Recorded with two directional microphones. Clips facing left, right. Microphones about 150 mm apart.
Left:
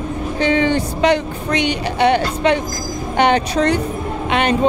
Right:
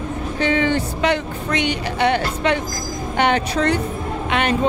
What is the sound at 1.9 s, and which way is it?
Speech, 20° left (ahead or behind).